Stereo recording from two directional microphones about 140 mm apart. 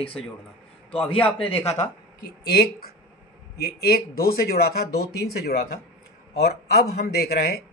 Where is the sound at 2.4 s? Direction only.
90° left.